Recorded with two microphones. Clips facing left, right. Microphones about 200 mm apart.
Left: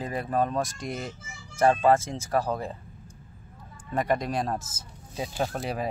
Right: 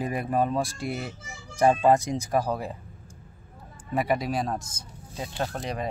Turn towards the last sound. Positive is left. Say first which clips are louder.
# left 1 dB
turn(degrees=5)  # may be behind; listen again after turning